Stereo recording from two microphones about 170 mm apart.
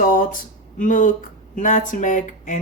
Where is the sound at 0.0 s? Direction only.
55° left (ahead or behind).